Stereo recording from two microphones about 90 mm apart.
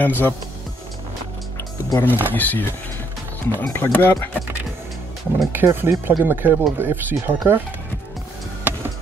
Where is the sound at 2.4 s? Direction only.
20° left (ahead or behind).